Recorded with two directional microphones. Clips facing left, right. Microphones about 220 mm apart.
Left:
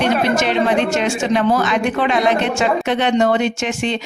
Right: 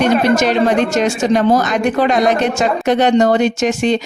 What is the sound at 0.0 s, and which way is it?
Speech, 40° right (ahead or behind).